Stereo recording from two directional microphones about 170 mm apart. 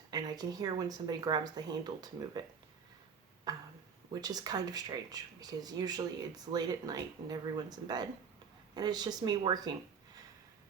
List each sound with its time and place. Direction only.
0.1 s speech: 25° right (ahead or behind)
3.5 s a sound: 20° right (ahead or behind)
4.1 s speech: 25° right (ahead or behind)